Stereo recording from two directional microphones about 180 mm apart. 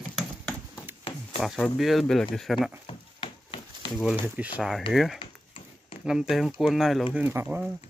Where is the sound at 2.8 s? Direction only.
30° left (ahead or behind).